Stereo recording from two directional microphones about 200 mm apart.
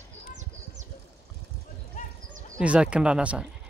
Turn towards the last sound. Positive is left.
turn(degrees=-5)  # may be behind; listen again after turning